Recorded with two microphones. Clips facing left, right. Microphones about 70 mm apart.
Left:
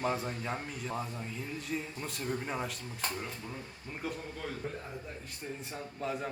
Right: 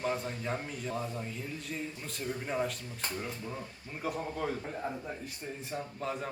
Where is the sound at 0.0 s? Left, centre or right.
Centre.